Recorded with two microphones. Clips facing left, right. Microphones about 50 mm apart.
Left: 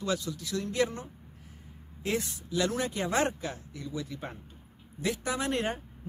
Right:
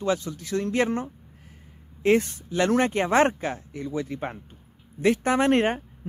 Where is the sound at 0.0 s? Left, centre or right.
Right.